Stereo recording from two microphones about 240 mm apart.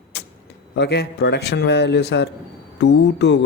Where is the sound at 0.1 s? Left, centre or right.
Left.